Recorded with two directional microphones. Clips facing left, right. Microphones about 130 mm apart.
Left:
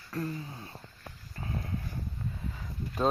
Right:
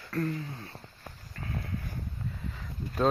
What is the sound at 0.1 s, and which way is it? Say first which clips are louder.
Speech: right 3 dB; 20° left (ahead or behind).